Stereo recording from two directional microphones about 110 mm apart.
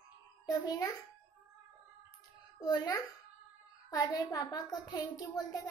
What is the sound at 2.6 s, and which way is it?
A woman's voice, 35° left (ahead or behind).